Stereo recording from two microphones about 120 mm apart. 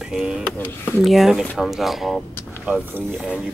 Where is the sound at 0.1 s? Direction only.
10° right (ahead or behind).